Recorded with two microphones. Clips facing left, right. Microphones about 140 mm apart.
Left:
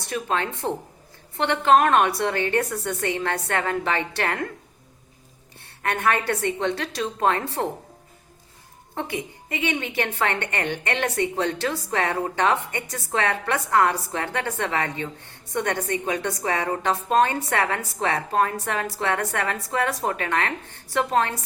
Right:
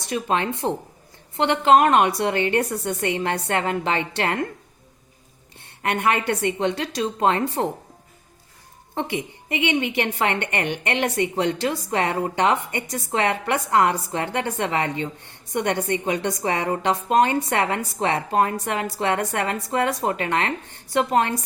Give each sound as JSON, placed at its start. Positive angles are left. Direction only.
{"t": 0.1, "sound": "a woman's voice", "side_deg": -20}
{"t": 5.8, "sound": "a woman's voice", "side_deg": -20}
{"t": 9.0, "sound": "a woman's voice", "side_deg": -20}